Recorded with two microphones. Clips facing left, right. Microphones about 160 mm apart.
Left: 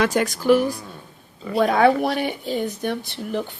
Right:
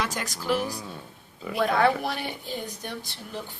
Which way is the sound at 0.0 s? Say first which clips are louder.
Left 11 dB; 60° left (ahead or behind).